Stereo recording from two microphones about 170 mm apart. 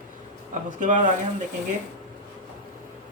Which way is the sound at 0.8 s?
50° right (ahead or behind).